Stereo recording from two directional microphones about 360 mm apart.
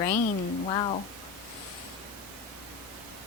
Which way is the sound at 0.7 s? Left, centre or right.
Centre.